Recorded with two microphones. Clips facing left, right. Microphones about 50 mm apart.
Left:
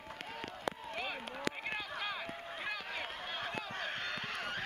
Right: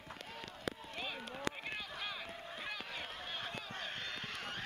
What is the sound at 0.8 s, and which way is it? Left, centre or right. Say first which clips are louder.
Run: left 3 dB; left.